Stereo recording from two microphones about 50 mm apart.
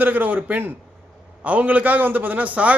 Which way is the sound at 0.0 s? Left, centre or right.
Right.